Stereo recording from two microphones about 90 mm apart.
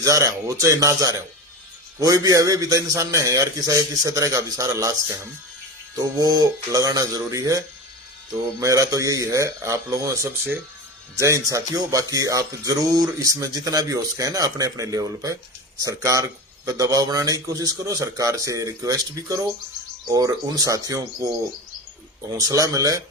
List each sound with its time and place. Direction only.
0.0 s music: 40° right (ahead or behind)
8.6 s music: 40° right (ahead or behind)
10.2 s speech: 25° right (ahead or behind)
11.2 s music: 35° right (ahead or behind)